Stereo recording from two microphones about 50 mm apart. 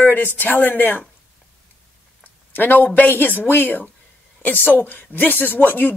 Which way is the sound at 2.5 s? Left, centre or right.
Left.